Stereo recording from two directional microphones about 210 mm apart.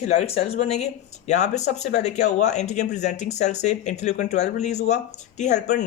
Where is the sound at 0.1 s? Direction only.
30° left (ahead or behind).